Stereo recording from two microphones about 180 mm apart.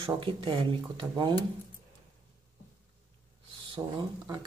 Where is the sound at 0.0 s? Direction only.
30° right (ahead or behind).